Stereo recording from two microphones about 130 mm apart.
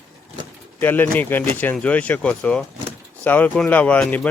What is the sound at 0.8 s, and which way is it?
A man's voice, 15° left (ahead or behind).